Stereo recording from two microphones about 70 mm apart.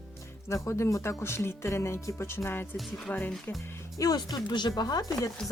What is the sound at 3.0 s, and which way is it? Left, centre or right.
Speech, left.